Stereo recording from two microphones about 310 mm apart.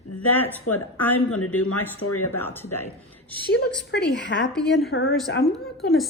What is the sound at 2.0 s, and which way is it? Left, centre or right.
Speech, left.